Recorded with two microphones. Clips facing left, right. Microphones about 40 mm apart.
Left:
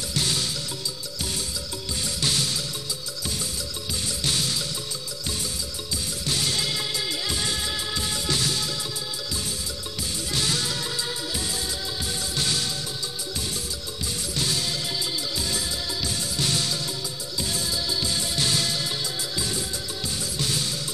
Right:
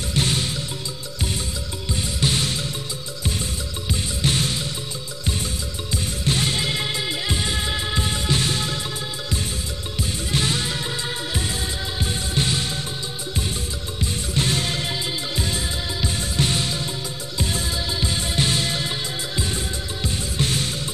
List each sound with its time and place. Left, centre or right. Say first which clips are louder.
0.1 s music: right 4 dB; right
2.1 s music: right 3 dB; right
4.2 s music: right 4 dB; right
6.2 s music: right 4 dB; right
10.3 s music: right 3 dB; right
14.3 s music: right 4 dB; right